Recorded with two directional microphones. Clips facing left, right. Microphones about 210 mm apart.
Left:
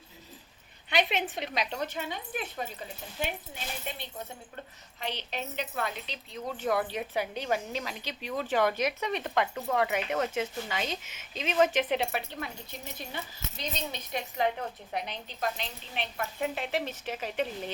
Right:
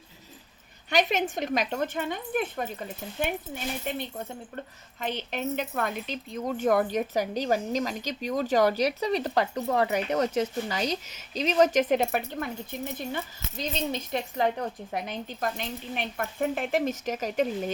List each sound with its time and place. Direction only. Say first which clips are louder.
0.9 s speech: right 4 dB; 45° right (ahead or behind)